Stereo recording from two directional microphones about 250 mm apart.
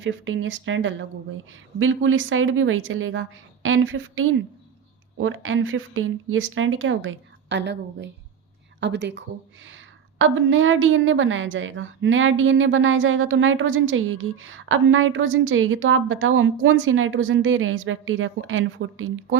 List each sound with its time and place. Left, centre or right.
0.0 s a woman's voice: right